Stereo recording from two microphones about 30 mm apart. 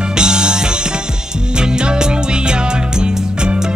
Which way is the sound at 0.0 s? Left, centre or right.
Right.